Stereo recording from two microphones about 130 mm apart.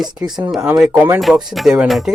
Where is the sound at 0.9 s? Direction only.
15° right (ahead or behind).